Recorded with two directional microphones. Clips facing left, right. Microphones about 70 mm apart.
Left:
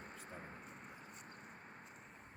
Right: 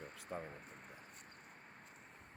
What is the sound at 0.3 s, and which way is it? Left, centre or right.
Speech, right.